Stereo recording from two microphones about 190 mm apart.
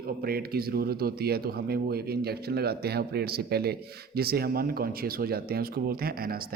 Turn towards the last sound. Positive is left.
turn(degrees=-50)  # may be behind; listen again after turning